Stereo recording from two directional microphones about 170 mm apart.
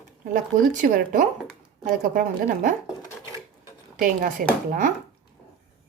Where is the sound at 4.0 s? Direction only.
55° right (ahead or behind).